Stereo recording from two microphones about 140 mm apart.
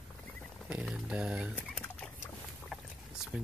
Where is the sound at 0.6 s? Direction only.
5° right (ahead or behind).